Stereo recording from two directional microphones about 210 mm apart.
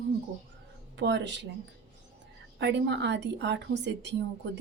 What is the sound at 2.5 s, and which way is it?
Speech, 55° right (ahead or behind).